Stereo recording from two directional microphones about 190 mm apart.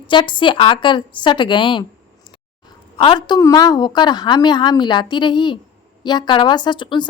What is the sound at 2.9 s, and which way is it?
A woman's voice, 25° left (ahead or behind).